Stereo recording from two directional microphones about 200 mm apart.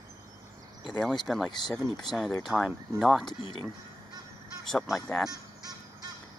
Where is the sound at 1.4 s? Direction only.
20° left (ahead or behind).